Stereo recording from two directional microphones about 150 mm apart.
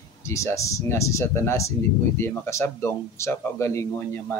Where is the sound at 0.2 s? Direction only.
20° left (ahead or behind).